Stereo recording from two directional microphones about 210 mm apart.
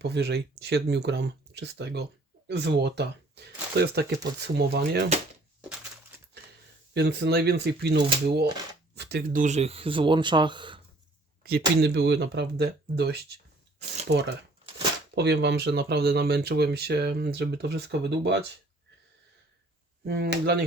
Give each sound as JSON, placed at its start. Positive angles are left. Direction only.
{"t": 0.0, "sound": "speech", "side_deg": -55}
{"t": 6.9, "sound": "speech", "side_deg": -50}
{"t": 11.4, "sound": "speech", "side_deg": -50}
{"t": 20.1, "sound": "speech", "side_deg": -55}